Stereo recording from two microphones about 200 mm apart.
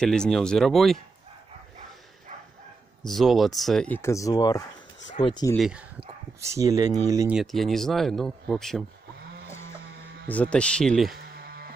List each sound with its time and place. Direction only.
0.0 s speech: 5° left (ahead or behind)
3.1 s speech: centre (ahead or behind); by 5.6 s 20° left (ahead or behind)
5.6 s speech: 5° right (ahead or behind)
6.4 s speech: 15° right (ahead or behind)
7.3 s speech: centre (ahead or behind)
10.2 s speech: 5° left (ahead or behind)
11.2 s music: 55° right (ahead or behind)